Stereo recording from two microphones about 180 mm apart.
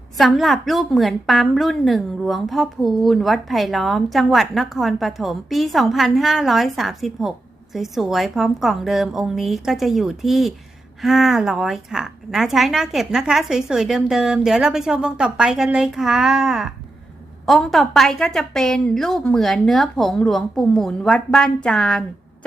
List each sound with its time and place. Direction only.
0.2 s a woman's voice: centre (ahead or behind)